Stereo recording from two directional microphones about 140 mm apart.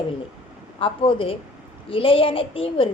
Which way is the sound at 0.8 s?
40° left (ahead or behind).